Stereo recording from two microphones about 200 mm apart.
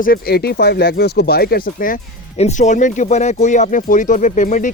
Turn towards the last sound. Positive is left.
turn(degrees=40)  # may be behind; listen again after turning